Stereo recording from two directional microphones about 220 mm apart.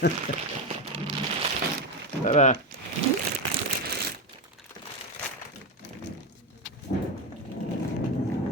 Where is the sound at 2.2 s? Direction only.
30° left (ahead or behind).